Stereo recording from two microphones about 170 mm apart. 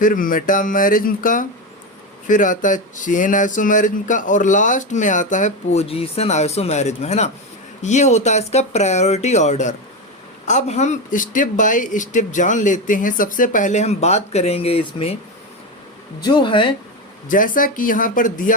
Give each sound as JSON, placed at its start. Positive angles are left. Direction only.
{"t": 0.0, "sound": "speech", "side_deg": 55}
{"t": 16.2, "sound": "speech", "side_deg": 25}
{"t": 17.2, "sound": "speech", "side_deg": 50}